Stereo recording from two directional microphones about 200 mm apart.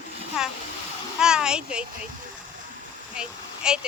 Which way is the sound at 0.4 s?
5° right (ahead or behind).